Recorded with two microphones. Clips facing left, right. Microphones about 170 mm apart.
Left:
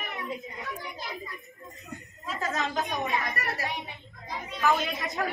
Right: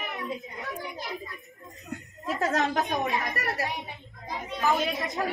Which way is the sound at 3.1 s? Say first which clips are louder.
Right 1 dB; centre (ahead or behind).